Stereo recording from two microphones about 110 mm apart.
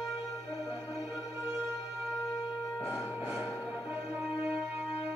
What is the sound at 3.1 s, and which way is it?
Music, 20° right (ahead or behind).